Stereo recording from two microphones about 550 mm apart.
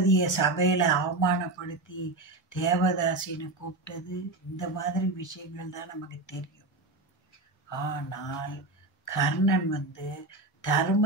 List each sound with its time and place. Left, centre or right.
0.0 s speech: left
7.7 s speech: left